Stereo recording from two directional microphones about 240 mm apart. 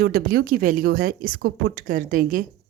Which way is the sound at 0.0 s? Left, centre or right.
Right.